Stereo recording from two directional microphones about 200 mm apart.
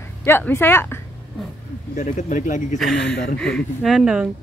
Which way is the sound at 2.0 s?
35° left (ahead or behind).